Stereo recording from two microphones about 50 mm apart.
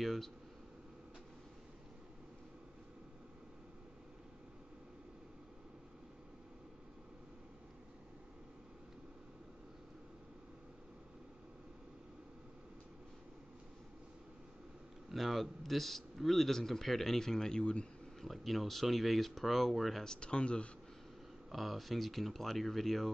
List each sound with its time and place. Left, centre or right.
0.0 s speech: centre
15.0 s a man's voice: centre
18.2 s speech: centre
20.1 s speech: centre
21.5 s speech: centre